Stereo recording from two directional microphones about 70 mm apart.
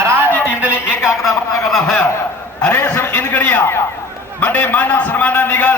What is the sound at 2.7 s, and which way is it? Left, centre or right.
A man's voice, left.